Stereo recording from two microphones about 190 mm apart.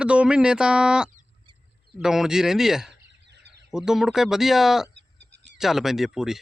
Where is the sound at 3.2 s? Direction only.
65° right (ahead or behind).